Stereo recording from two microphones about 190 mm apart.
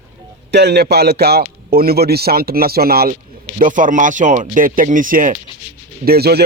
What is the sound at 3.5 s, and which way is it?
A man's voice, 45° right (ahead or behind).